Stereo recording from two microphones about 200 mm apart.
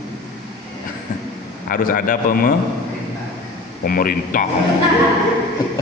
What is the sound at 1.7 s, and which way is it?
Speech, 45° left (ahead or behind).